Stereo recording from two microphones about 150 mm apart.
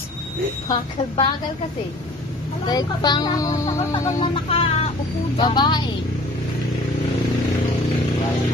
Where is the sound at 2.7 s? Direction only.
25° left (ahead or behind).